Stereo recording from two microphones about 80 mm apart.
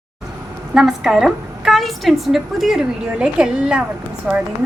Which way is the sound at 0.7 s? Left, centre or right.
Centre.